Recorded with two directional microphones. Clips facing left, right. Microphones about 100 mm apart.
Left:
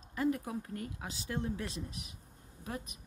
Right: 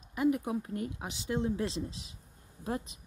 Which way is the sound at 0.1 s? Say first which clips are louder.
Right 4 dB; 15° right (ahead or behind).